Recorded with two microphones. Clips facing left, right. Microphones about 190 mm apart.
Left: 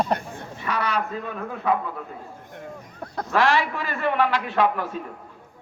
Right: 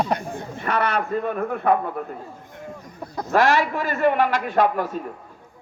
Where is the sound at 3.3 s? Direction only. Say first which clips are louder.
Right 3 dB; 45° right (ahead or behind).